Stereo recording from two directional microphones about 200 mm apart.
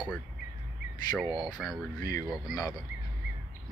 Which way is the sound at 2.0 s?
20° left (ahead or behind).